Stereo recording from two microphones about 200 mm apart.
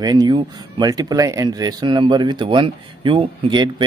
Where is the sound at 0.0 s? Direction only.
20° right (ahead or behind).